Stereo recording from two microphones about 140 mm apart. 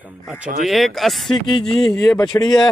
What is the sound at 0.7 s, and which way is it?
Speech, centre (ahead or behind).